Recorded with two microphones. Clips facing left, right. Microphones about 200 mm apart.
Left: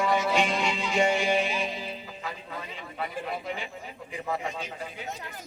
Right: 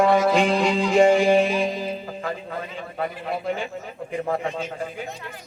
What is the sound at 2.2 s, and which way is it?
Speech, 50° right (ahead or behind).